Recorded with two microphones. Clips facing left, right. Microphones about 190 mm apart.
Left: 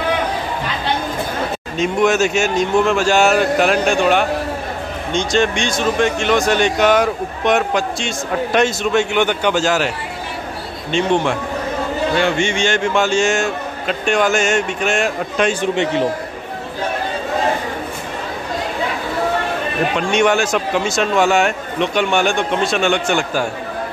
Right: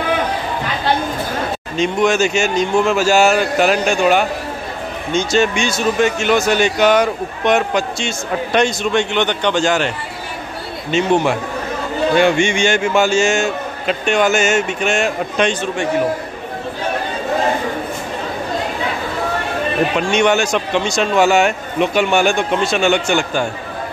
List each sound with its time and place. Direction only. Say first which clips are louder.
1.8 s speech: even; centre (ahead or behind)
15.6 s a man's voice: left 1 dB; 20° left (ahead or behind)
20.0 s speech: left 1 dB; centre (ahead or behind)